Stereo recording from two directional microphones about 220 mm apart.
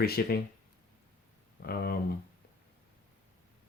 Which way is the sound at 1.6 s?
45° left (ahead or behind).